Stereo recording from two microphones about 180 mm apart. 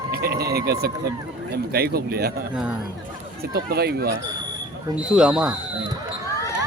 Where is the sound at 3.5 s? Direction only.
60° right (ahead or behind).